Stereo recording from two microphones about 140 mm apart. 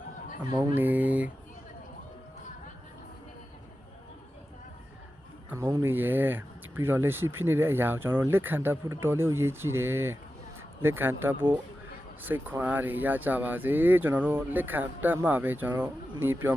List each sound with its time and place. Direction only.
0.5 s speech: 15° right (ahead or behind)
5.5 s speech: 20° right (ahead or behind)